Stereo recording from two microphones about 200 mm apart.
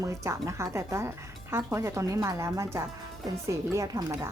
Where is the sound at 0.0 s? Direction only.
15° right (ahead or behind).